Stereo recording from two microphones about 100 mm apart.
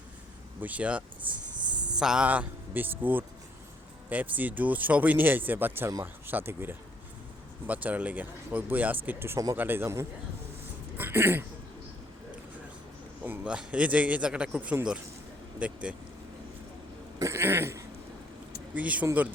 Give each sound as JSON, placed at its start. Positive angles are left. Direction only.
{"t": 0.6, "sound": "speech", "side_deg": -15}
{"t": 6.2, "sound": "cough", "side_deg": -20}
{"t": 7.7, "sound": "speech", "side_deg": -15}
{"t": 9.0, "sound": "cough", "side_deg": -25}
{"t": 10.9, "sound": "speech", "side_deg": -20}
{"t": 13.2, "sound": "speech", "side_deg": -15}
{"t": 17.2, "sound": "cough", "side_deg": -30}
{"t": 18.7, "sound": "speech", "side_deg": -15}